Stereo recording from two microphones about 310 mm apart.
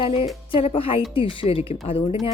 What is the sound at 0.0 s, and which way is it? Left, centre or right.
Speech, centre.